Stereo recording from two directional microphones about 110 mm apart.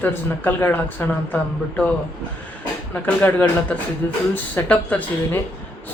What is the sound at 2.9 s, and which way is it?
A woman's voice, 15° left (ahead or behind).